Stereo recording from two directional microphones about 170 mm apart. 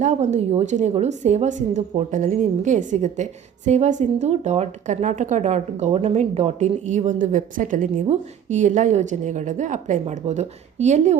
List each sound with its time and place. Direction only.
0.0 s speech: 45° right (ahead or behind)